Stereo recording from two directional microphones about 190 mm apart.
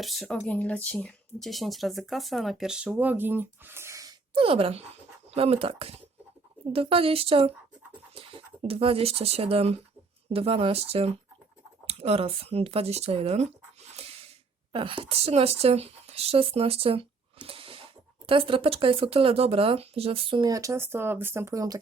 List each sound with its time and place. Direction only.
0.0 s speech: centre (ahead or behind); by 4.1 s 15° right (ahead or behind)
4.4 s speech: 30° right (ahead or behind)
13.9 s a sound: 30° right (ahead or behind)
14.7 s speech: 25° right (ahead or behind)
20.4 s speech: 15° right (ahead or behind)